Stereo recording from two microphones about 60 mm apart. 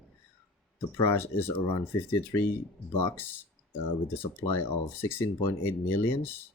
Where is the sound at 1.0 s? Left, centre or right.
Left.